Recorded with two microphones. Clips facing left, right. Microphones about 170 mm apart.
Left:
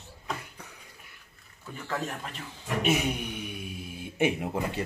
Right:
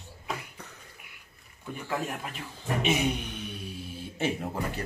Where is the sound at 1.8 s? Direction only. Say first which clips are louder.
Right 1 dB; 10° right (ahead or behind).